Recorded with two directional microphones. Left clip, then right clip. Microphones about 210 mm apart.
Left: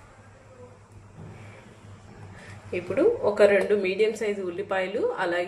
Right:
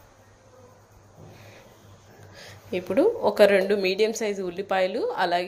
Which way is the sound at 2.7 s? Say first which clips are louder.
Right 1 dB; 45° right (ahead or behind).